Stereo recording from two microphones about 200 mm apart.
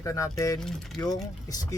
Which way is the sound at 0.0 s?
15° left (ahead or behind).